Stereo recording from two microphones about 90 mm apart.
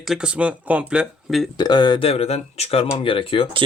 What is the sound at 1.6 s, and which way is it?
Speech, 55° left (ahead or behind).